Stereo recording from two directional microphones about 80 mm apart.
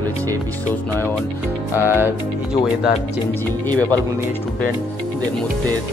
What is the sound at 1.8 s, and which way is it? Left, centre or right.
Music, right.